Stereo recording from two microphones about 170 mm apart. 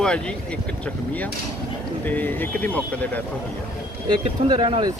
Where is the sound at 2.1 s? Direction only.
10° left (ahead or behind).